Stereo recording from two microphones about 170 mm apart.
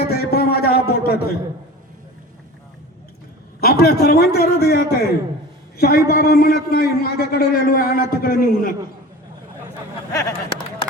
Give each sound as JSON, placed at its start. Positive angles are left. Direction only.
{"t": 0.0, "sound": "a sound", "side_deg": 70}
{"t": 3.6, "sound": "a man's voice", "side_deg": 65}
{"t": 10.1, "sound": "speech", "side_deg": 20}